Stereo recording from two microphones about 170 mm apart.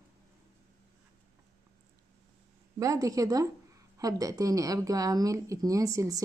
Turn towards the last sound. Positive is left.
turn(degrees=-20)  # may be behind; listen again after turning